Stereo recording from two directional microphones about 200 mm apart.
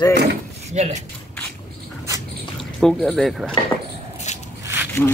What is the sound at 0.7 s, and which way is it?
Speech, 35° right (ahead or behind).